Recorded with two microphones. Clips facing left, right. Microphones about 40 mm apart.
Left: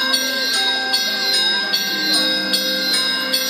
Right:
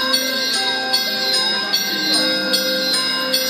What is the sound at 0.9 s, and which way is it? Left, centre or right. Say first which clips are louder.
Music: even; left.